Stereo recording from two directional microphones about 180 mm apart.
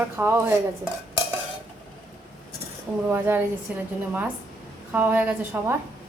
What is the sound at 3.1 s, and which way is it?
A woman's voice, 10° right (ahead or behind).